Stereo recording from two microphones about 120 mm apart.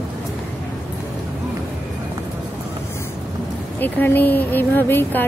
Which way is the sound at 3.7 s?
15° left (ahead or behind).